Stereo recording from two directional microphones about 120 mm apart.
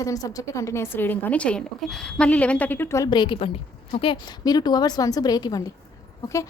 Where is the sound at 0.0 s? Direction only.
30° left (ahead or behind).